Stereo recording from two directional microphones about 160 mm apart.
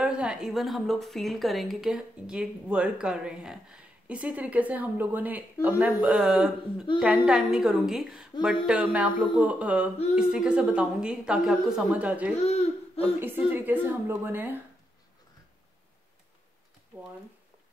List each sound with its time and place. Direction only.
0.0 s a woman's voice: 5° right (ahead or behind)
12.4 s speech: 40° left (ahead or behind)
13.2 s a woman's voice: 10° right (ahead or behind)